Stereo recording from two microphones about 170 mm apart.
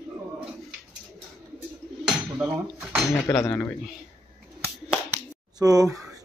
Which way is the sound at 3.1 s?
15° left (ahead or behind).